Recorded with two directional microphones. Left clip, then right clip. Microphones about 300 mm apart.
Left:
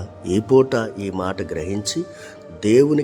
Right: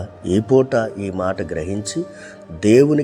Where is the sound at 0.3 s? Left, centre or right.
Centre.